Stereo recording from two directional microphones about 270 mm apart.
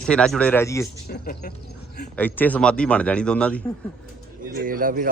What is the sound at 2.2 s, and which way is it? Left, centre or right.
Speech, centre.